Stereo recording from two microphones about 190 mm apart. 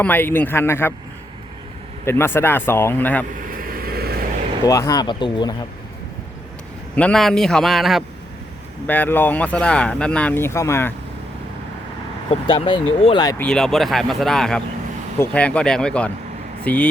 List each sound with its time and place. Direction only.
0.0 s speech: 10° left (ahead or behind)
2.0 s speech: 10° left (ahead or behind)
3.7 s vehicle: 50° right (ahead or behind)
4.6 s speech: 15° left (ahead or behind)
6.9 s speech: 5° left (ahead or behind)
8.9 s speech: 10° left (ahead or behind)
12.3 s speech: 30° left (ahead or behind)
13.4 s speech: 5° left (ahead or behind)